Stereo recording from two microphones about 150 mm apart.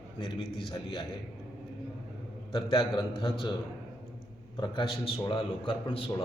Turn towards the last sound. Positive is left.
turn(degrees=40)  # may be behind; listen again after turning